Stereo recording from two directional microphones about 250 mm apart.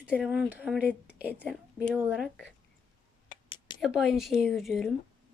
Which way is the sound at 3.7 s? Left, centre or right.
Centre.